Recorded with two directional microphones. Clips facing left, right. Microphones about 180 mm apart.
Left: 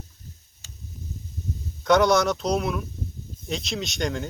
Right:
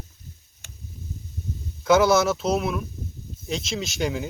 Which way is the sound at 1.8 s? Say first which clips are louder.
Right 1 dB; 5° right (ahead or behind).